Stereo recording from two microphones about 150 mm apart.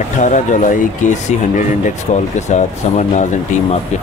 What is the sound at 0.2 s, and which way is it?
Speech, 55° left (ahead or behind).